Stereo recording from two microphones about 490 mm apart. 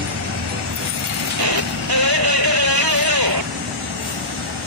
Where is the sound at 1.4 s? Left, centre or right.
Right.